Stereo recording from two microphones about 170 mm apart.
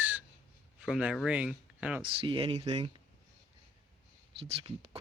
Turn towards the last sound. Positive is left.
turn(degrees=-35)  # may be behind; listen again after turning